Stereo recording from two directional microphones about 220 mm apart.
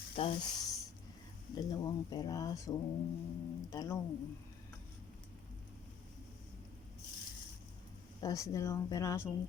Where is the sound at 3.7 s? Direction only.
15° left (ahead or behind).